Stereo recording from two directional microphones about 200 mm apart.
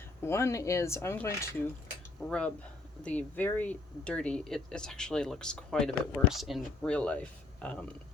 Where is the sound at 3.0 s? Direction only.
5° left (ahead or behind).